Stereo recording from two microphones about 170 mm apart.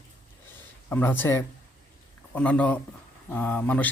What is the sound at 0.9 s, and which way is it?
Speech, 10° left (ahead or behind).